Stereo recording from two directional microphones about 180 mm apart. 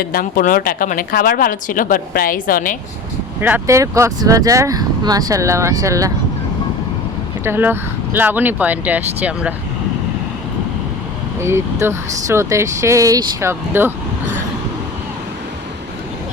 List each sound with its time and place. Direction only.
0.0 s speech: 55° left (ahead or behind)
3.4 s speech: 15° right (ahead or behind)
7.4 s speech: 10° right (ahead or behind)
11.3 s speech: 15° right (ahead or behind)